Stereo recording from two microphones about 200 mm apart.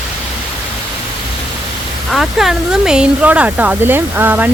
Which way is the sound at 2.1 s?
Centre (ahead or behind).